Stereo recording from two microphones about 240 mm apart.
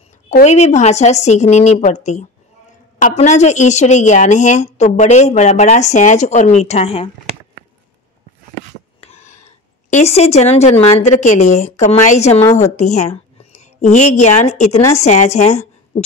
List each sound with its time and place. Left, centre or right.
0.3 s a woman's voice: left
9.0 s a sound: left
9.8 s a woman's voice: left